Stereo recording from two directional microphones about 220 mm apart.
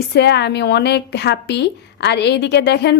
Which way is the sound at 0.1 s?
50° left (ahead or behind).